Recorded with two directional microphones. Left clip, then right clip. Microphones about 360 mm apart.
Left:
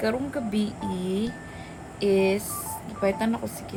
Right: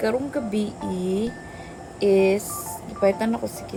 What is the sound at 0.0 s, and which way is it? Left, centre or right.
Speech, centre.